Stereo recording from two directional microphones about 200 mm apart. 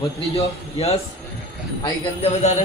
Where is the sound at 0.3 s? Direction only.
30° left (ahead or behind).